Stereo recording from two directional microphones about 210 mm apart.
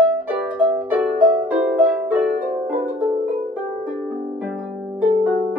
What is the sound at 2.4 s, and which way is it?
Music, 40° right (ahead or behind).